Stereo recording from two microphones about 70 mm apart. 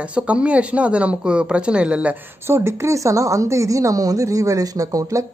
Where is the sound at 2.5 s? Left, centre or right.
Right.